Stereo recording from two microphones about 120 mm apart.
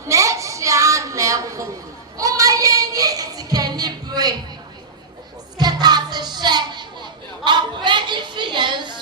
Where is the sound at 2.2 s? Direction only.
30° right (ahead or behind).